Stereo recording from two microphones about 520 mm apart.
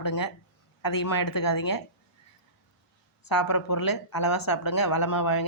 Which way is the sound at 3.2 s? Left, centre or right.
Left.